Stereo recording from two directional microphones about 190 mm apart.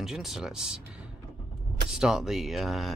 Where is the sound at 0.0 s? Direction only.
Centre (ahead or behind).